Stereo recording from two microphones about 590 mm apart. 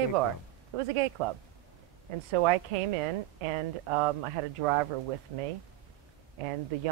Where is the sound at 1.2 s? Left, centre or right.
Right.